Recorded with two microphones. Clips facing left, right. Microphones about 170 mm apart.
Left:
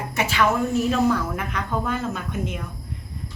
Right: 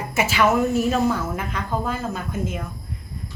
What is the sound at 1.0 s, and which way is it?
Speech, 25° right (ahead or behind).